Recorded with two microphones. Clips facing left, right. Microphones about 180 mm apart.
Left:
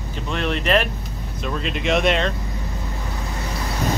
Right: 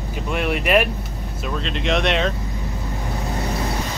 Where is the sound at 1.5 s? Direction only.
5° left (ahead or behind).